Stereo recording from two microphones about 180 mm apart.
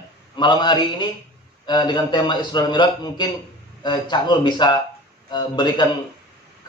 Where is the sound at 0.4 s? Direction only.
25° left (ahead or behind).